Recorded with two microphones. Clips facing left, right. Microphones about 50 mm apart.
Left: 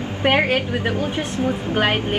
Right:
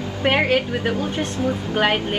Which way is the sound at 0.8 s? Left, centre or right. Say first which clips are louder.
Even; left.